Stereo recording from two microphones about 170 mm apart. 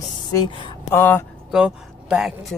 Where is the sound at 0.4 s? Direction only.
30° left (ahead or behind).